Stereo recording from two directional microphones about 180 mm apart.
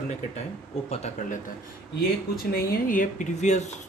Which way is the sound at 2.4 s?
50° left (ahead or behind).